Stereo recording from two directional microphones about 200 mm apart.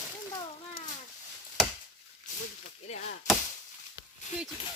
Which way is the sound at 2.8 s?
35° left (ahead or behind).